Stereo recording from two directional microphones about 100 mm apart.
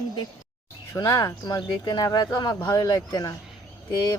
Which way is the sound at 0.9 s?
35° left (ahead or behind).